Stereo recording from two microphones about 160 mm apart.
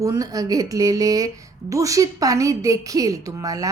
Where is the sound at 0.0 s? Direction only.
20° right (ahead or behind).